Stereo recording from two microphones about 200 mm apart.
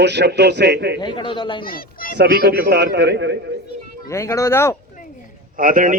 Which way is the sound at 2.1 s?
55° right (ahead or behind).